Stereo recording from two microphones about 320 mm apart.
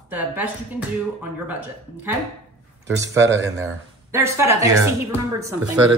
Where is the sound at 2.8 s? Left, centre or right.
Centre.